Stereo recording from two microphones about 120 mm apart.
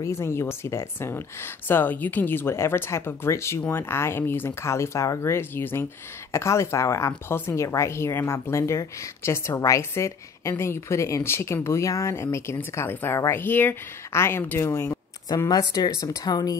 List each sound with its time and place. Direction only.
0.0 s speech: 20° left (ahead or behind)
15.2 s speech: 35° left (ahead or behind)